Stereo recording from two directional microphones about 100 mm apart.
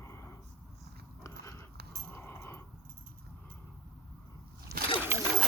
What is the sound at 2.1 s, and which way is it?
Dog, 25° left (ahead or behind).